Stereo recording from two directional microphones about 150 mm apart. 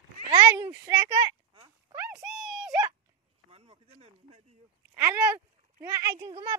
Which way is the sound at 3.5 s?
40° right (ahead or behind).